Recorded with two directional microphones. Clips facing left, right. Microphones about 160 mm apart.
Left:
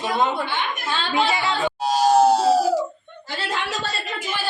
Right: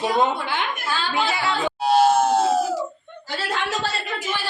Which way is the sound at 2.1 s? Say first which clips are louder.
Left 2 dB; 35° left (ahead or behind).